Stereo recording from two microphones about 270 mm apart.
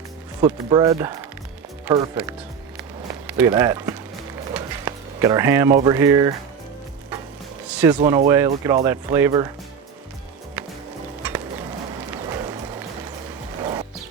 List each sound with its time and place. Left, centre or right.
0.4 s speech: centre
3.2 s speech: centre
4.5 s a sound: centre
5.8 s speech: centre
7.8 s speech: centre
10.6 s music: centre
12.3 s a sound: centre
13.6 s music: centre